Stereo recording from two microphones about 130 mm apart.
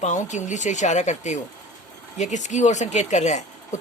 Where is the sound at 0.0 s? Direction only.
70° left (ahead or behind).